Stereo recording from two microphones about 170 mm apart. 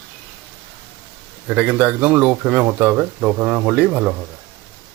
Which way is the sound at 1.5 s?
10° right (ahead or behind).